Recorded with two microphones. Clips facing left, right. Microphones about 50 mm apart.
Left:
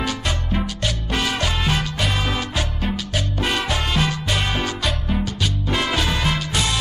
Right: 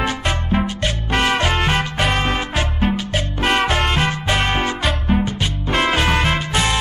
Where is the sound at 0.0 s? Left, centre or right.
Right.